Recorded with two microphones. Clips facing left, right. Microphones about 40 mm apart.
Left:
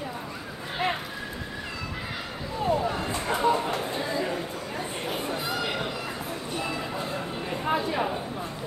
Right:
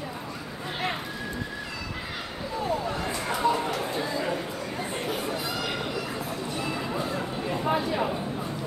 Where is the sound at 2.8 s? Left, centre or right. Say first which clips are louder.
Left 1 dB; centre.